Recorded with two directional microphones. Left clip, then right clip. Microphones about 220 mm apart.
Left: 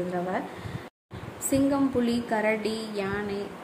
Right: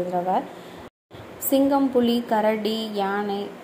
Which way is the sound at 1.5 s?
5° right (ahead or behind).